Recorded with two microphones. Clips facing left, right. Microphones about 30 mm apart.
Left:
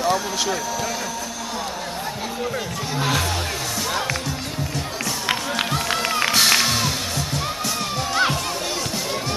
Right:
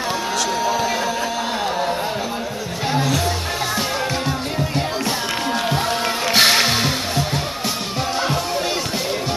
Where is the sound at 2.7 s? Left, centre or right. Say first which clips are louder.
Right 5 dB; right.